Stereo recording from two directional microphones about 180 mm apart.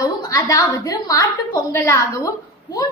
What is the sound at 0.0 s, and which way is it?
A woman's voice, 20° left (ahead or behind).